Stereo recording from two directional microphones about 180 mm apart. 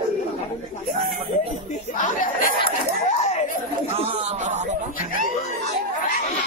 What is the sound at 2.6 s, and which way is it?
Chatter, 40° left (ahead or behind).